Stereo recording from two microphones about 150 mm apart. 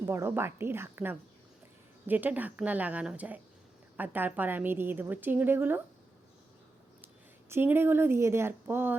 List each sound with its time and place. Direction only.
0.0 s a woman's voice: 15° right (ahead or behind)
7.5 s a woman's voice: 15° right (ahead or behind)